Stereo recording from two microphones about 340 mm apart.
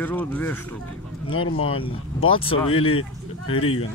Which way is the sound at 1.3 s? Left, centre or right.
Left.